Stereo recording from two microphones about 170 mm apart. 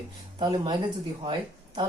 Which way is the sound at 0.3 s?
25° right (ahead or behind).